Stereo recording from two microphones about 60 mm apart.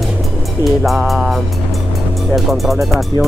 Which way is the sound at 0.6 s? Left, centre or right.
Left.